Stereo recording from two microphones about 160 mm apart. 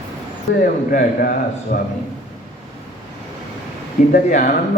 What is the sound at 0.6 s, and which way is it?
A man's voice, 60° left (ahead or behind).